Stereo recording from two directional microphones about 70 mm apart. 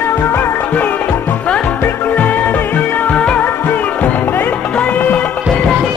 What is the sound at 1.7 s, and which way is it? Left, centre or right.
Music, left.